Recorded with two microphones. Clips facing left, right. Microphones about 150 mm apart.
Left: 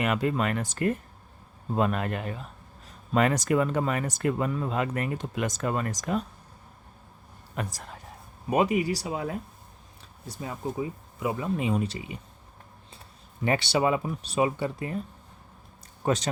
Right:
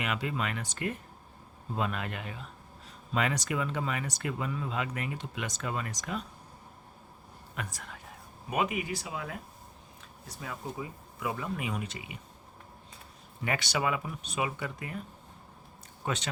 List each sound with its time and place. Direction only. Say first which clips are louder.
0.0 s speech: left 7 dB; 45° left (ahead or behind)
7.5 s speech: left 6 dB; 35° left (ahead or behind)
13.4 s speech: left 6 dB; 30° left (ahead or behind)
16.0 s speech: left 8 dB; 40° left (ahead or behind)